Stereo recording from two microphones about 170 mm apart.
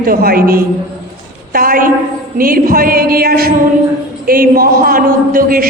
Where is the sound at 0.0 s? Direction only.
60° right (ahead or behind).